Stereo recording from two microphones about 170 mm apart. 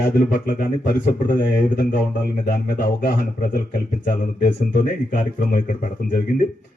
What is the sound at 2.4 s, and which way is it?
A man's voice, 55° left (ahead or behind).